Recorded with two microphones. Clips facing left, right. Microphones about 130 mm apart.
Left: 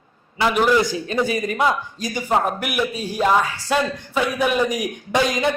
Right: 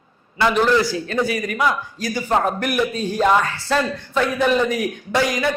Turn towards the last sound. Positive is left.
turn(degrees=20)  # may be behind; listen again after turning